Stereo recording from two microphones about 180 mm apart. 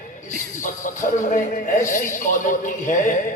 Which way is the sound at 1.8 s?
45° left (ahead or behind).